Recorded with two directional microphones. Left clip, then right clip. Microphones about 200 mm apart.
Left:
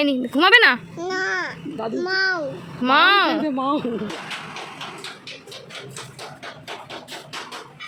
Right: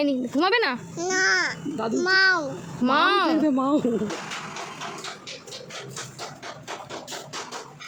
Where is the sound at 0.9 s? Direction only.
40° right (ahead or behind).